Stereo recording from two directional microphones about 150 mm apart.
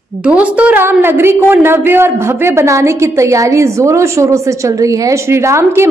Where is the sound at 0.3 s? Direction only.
10° right (ahead or behind).